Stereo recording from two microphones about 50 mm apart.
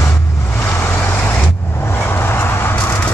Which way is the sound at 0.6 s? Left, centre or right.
Left.